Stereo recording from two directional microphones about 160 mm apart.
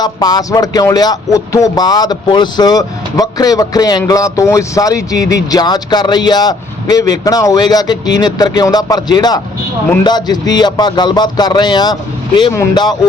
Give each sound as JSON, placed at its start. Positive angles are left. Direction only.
{"t": 0.0, "sound": "speech", "side_deg": 25}